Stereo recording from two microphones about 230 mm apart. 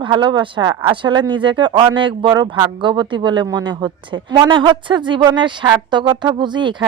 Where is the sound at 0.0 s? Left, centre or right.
Right.